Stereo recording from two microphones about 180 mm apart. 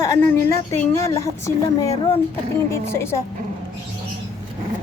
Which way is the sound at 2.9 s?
15° left (ahead or behind).